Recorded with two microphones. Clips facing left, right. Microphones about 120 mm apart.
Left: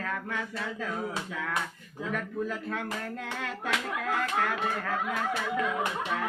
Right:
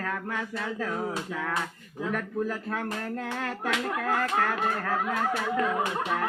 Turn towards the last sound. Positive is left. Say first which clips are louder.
# right 3 dB
turn(degrees=-55)  # may be behind; listen again after turning